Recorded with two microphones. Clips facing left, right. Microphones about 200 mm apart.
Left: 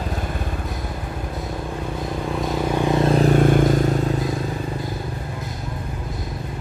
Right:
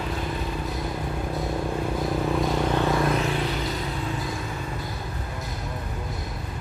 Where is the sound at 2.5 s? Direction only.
10° left (ahead or behind).